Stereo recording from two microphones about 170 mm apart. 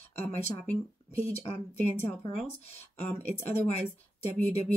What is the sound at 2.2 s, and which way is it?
Speech, 25° left (ahead or behind).